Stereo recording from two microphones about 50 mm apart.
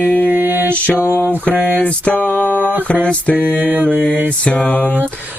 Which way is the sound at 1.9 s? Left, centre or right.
Left.